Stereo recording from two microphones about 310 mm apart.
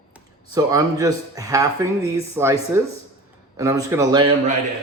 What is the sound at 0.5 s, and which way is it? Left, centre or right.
Speech, centre.